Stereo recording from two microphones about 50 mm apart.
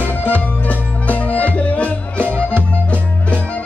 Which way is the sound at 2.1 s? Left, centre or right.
Right.